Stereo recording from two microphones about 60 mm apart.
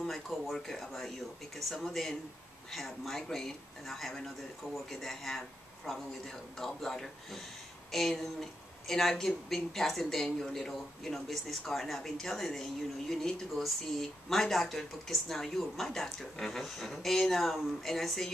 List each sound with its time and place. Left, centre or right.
0.0 s speech: centre